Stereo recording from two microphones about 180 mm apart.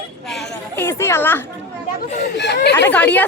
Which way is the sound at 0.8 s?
15° left (ahead or behind).